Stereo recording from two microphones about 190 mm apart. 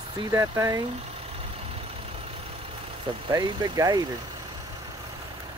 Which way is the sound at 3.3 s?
20° right (ahead or behind).